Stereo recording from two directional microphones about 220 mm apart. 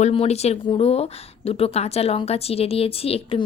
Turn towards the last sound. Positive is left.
turn(degrees=25)  # may be behind; listen again after turning